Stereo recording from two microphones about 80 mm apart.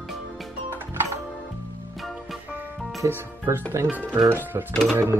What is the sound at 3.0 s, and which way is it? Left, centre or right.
Speech, right.